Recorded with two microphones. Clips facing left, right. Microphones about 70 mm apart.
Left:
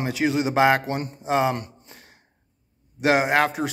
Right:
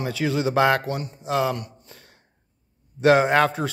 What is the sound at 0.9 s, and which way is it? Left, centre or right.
Speech, left.